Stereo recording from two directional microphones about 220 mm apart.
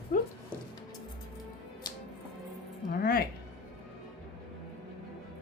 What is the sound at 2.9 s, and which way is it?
Music, 45° left (ahead or behind).